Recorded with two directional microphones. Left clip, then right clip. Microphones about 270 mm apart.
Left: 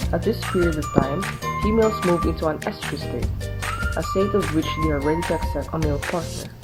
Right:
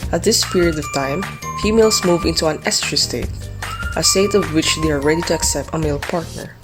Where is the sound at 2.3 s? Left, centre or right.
Right.